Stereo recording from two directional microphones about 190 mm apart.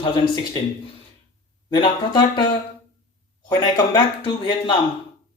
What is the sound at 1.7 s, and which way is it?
Speech, 25° left (ahead or behind).